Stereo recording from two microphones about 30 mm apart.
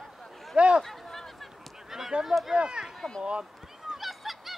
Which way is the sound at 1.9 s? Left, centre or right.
Centre.